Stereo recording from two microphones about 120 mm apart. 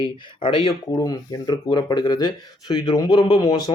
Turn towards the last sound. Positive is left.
turn(degrees=35)  # may be behind; listen again after turning